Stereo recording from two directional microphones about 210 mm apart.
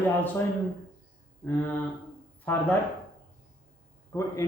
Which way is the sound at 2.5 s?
10° left (ahead or behind).